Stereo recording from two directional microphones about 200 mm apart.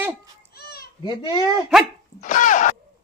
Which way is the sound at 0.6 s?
50° left (ahead or behind).